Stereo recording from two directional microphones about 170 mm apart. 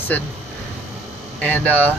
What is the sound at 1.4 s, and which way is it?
Speech, 10° left (ahead or behind).